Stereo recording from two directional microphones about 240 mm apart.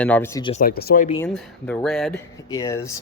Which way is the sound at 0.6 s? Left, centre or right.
Left.